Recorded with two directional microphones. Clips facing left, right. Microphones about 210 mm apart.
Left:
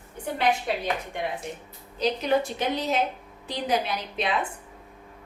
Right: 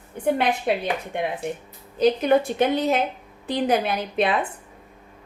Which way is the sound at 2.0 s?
55° right (ahead or behind).